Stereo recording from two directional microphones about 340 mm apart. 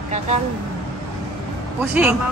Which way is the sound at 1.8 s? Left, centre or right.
Centre.